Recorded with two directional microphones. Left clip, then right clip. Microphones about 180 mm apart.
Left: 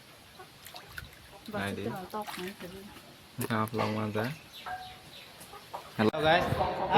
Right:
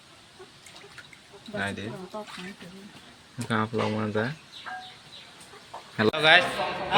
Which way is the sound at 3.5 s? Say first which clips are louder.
Right 4 dB; 20° right (ahead or behind).